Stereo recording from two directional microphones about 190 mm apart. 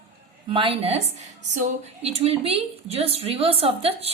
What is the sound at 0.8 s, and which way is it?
A woman's voice, 30° right (ahead or behind).